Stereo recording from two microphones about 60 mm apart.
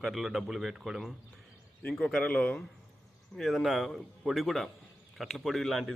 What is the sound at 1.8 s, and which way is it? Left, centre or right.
Speech, centre.